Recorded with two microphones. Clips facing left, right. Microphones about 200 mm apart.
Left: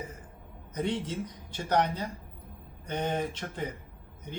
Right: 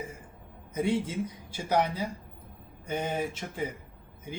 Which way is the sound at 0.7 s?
10° right (ahead or behind).